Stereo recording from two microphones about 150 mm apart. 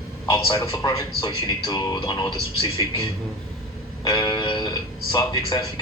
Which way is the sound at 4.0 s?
30° left (ahead or behind).